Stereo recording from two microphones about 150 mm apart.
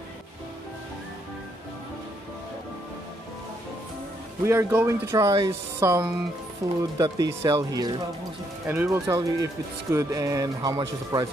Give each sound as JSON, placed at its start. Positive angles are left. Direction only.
{"t": 4.5, "sound": "speech", "side_deg": -20}
{"t": 8.6, "sound": "speech", "side_deg": -15}